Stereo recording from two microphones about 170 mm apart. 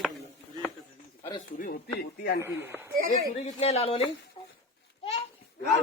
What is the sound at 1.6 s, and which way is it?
Speech, 60° left (ahead or behind).